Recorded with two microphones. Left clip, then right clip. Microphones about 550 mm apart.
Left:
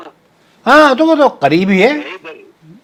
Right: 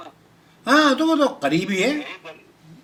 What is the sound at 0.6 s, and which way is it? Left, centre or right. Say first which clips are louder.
Speech: left 9 dB; left.